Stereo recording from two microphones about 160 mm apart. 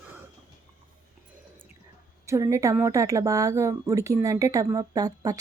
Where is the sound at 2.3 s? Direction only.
20° right (ahead or behind).